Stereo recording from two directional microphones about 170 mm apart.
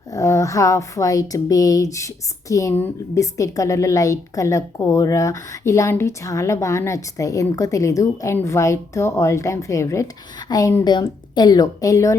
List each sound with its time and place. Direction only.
0.1 s speech: 20° left (ahead or behind)